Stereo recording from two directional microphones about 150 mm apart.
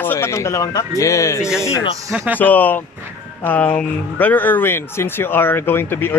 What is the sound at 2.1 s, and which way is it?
Speech, 15° right (ahead or behind).